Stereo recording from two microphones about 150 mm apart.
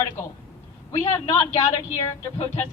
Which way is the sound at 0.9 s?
20° left (ahead or behind).